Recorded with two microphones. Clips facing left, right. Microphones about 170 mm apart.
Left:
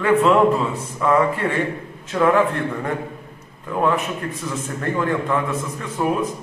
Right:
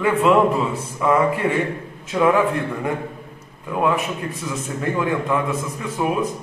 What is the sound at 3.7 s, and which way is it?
A man's voice, 10° right (ahead or behind).